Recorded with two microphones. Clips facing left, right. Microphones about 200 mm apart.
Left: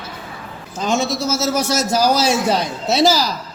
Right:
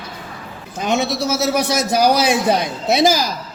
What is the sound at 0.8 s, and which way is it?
A woman's voice, 65° right (ahead or behind).